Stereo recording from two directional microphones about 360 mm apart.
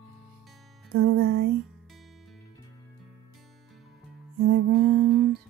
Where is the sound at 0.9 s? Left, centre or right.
Right.